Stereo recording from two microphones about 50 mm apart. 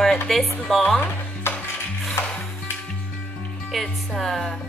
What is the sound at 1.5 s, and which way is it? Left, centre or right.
Music, left.